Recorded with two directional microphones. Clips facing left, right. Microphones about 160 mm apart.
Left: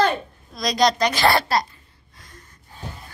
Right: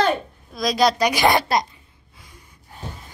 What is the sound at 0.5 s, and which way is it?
A woman's voice, 5° right (ahead or behind).